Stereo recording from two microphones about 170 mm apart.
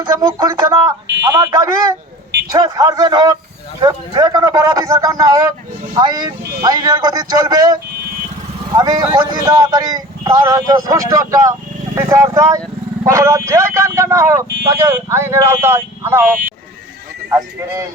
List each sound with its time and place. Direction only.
0.0 s speech: 25° right (ahead or behind)
2.5 s speech: 20° right (ahead or behind)